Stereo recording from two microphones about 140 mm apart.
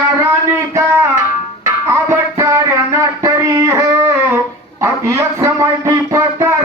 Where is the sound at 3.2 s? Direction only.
20° right (ahead or behind).